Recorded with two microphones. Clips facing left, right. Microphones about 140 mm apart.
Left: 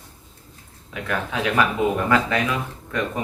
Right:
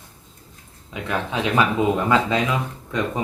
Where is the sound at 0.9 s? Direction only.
20° right (ahead or behind).